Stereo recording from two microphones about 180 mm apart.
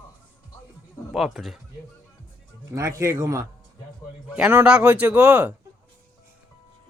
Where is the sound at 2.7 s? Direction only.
20° right (ahead or behind).